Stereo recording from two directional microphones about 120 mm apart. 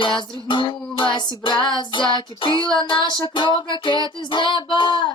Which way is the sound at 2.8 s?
40° left (ahead or behind).